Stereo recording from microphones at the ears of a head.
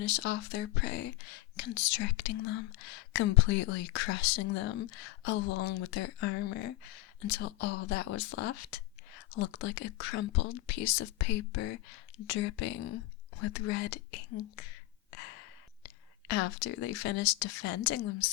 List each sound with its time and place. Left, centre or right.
0.0 s speech: left